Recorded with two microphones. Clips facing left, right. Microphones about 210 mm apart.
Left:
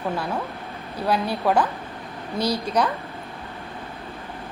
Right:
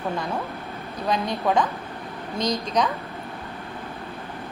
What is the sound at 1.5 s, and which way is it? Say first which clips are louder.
A woman's voice: left 1 dB; 5° left (ahead or behind).